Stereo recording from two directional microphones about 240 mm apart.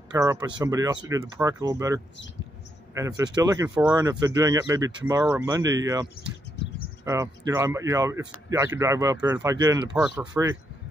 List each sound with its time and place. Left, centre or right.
0.1 s speech: centre
7.1 s speech: centre
9.9 s speech: centre
10.2 s speech: centre